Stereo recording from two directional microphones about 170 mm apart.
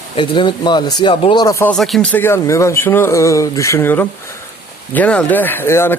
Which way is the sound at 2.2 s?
15° left (ahead or behind).